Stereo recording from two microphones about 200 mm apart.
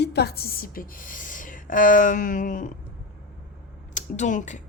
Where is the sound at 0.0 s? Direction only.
55° left (ahead or behind).